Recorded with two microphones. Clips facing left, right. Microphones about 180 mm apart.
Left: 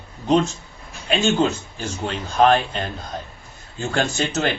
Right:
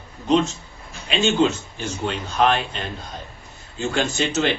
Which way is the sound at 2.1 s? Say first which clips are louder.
Left 4 dB; 40° left (ahead or behind).